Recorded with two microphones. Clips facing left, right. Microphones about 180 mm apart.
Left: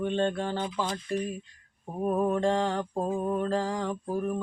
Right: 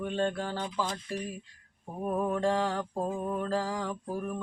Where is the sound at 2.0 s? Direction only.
15° left (ahead or behind).